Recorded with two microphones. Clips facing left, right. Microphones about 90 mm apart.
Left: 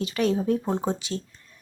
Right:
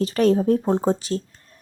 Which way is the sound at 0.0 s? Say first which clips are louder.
Right 6 dB; 40° right (ahead or behind).